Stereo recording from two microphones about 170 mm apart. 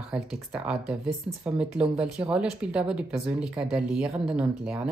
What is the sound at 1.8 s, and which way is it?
Speech, 5° right (ahead or behind).